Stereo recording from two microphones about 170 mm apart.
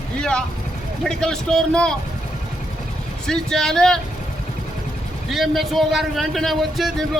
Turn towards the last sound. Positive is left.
turn(degrees=0)  # may be behind; listen again after turning